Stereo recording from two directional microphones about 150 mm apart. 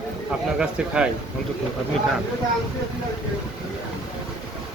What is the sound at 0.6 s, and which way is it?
Speech, 5° right (ahead or behind).